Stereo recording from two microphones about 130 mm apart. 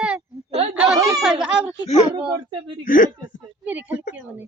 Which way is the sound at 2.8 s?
90° left.